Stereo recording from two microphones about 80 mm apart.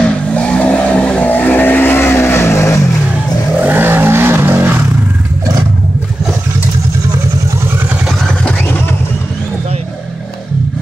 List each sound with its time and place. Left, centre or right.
0.0 s vehicle: centre; by 2.9 s left
3.6 s vehicle: right